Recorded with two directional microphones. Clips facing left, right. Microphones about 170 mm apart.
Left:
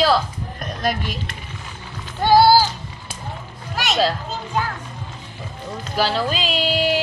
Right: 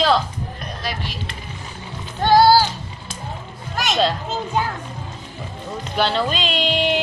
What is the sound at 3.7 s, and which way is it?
Speech, centre (ahead or behind).